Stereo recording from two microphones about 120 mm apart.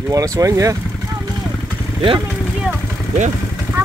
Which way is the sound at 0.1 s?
30° right (ahead or behind).